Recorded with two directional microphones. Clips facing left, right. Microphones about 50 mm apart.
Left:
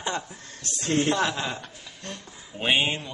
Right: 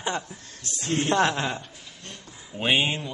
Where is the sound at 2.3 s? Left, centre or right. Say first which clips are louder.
Right 1 dB; centre.